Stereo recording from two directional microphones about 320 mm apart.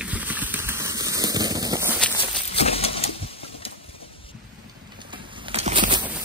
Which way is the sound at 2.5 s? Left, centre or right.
Centre.